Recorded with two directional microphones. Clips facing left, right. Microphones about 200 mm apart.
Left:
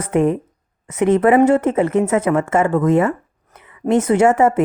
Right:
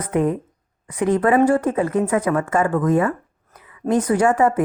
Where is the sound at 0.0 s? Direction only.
25° left (ahead or behind).